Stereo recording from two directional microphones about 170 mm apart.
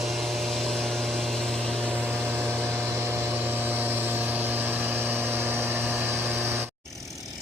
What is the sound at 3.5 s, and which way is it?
Vehicle, 10° right (ahead or behind).